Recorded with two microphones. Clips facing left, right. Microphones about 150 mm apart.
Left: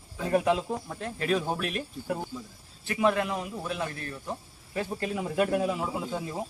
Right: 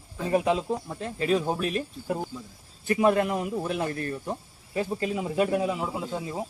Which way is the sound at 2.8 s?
45° right (ahead or behind).